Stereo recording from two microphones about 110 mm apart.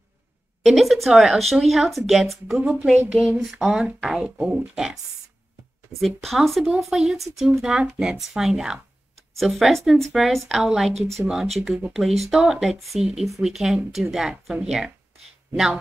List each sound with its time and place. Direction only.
0.6 s speech: centre (ahead or behind)
2.6 s speech: 10° right (ahead or behind)
3.2 s speech: centre (ahead or behind)
5.9 s speech: centre (ahead or behind)
11.0 s speech: 70° right (ahead or behind)
11.5 s speech: 5° right (ahead or behind)